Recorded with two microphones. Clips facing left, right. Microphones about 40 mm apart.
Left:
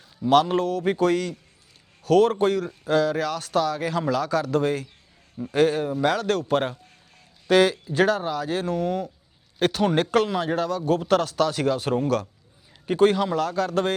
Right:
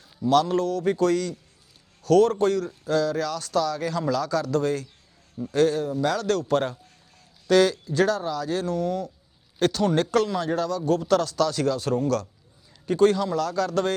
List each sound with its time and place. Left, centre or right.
0.2 s speech: left